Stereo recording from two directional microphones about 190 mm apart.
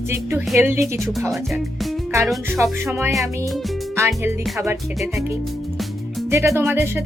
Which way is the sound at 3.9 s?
15° right (ahead or behind).